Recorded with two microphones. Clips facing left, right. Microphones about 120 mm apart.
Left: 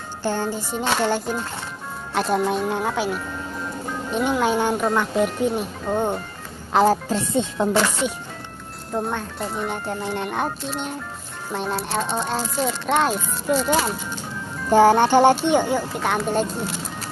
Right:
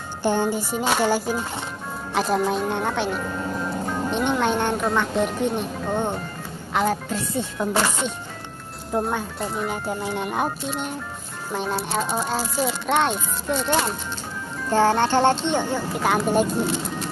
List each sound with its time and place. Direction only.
0.2 s a child's voice: 15° right (ahead or behind); by 6.2 s 5° left (ahead or behind)
6.7 s speech: 35° left (ahead or behind)
7.3 s music: 25° left (ahead or behind)
8.9 s a child's voice: 5° right (ahead or behind)
14.7 s speech: 15° left (ahead or behind)
15.9 s a child's voice: 5° right (ahead or behind)